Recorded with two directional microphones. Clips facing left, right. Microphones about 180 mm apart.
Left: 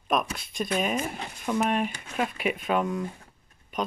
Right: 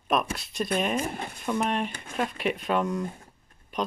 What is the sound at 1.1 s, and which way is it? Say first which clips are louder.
Speech: right 2 dB; 55° right (ahead or behind).